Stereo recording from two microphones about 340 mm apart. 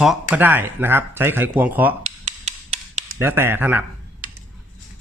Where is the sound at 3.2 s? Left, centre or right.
Centre.